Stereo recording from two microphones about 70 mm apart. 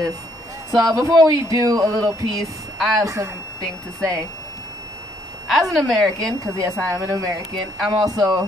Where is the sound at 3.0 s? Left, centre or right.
Right.